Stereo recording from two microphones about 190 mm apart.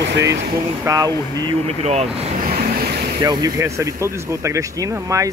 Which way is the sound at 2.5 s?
50° right (ahead or behind).